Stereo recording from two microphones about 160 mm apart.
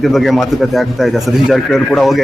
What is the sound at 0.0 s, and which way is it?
Speech, centre (ahead or behind).